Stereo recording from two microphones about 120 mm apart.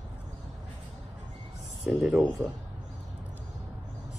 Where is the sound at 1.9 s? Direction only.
Centre (ahead or behind).